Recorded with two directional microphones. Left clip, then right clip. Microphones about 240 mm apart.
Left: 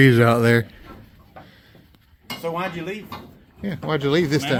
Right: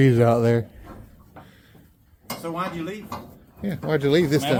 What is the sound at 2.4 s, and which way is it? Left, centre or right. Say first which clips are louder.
Speech: left 3 dB; left.